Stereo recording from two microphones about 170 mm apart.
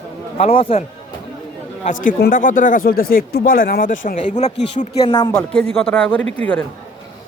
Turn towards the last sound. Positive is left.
turn(degrees=10)  # may be behind; listen again after turning